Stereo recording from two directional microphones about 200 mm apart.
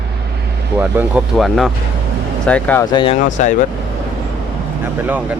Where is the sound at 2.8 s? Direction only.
25° left (ahead or behind).